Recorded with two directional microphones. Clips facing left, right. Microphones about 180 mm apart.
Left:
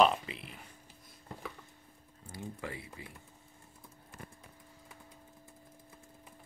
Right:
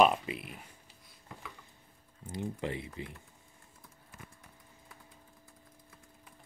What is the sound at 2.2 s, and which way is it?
Speech, 20° right (ahead or behind).